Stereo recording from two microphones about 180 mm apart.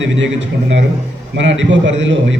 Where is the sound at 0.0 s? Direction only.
90° right.